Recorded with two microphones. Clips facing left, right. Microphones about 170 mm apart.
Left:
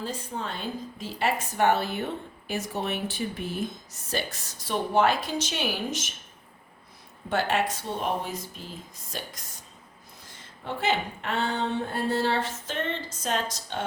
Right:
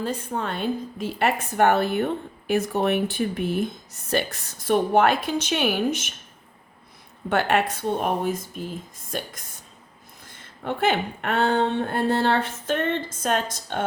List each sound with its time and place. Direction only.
0.0 s a woman's voice: 60° right (ahead or behind)
7.3 s a woman's voice: 60° right (ahead or behind)
10.6 s a woman's voice: 55° right (ahead or behind)